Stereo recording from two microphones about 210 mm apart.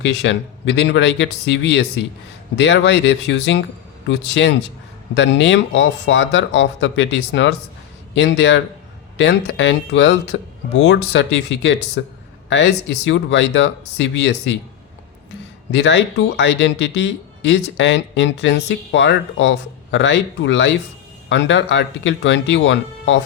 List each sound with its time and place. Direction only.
0.0 s speech: 60° left (ahead or behind)
15.7 s speech: 55° left (ahead or behind)